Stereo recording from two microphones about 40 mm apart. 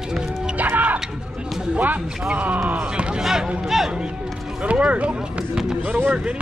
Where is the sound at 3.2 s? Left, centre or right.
Centre.